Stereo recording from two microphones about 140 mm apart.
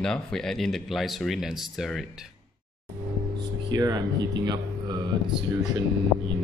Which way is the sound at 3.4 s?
30° right (ahead or behind).